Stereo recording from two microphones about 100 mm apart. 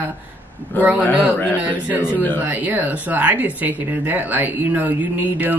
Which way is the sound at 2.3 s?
15° right (ahead or behind).